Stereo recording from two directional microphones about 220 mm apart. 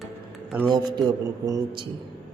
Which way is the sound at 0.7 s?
20° right (ahead or behind).